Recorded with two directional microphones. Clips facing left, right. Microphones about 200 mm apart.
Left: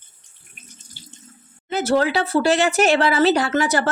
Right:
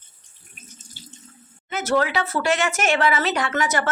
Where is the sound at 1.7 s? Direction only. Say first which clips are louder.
Left 3 dB; 30° left (ahead or behind).